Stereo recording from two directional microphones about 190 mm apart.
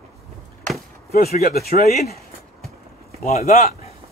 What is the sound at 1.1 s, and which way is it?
Speech, 50° left (ahead or behind).